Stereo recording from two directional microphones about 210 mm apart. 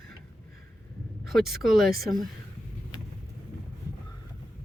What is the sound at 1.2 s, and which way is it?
Speech, centre (ahead or behind).